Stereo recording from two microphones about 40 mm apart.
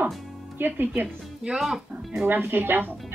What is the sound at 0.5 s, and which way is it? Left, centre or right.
Speech, right.